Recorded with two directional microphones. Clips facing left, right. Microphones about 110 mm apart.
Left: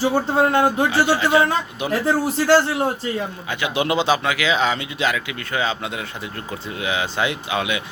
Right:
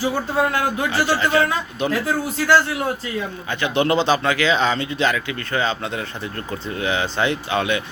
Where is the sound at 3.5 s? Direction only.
10° left (ahead or behind).